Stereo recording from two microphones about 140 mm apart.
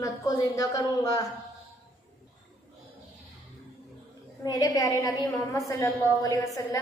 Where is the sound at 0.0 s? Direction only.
25° left (ahead or behind).